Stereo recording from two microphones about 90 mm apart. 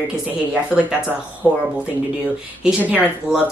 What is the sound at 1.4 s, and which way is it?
Speech, 40° right (ahead or behind).